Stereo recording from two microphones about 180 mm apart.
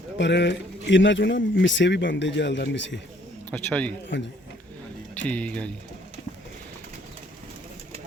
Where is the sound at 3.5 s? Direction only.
10° left (ahead or behind).